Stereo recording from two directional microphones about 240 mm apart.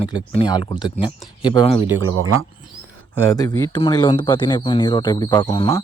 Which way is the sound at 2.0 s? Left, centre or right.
Right.